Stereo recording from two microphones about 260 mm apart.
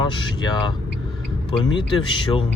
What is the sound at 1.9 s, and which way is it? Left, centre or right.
Speech, centre.